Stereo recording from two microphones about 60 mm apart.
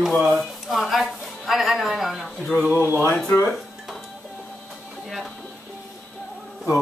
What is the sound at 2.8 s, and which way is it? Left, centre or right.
Speech, left.